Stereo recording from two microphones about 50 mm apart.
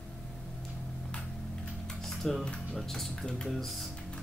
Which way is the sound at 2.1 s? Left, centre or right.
Centre.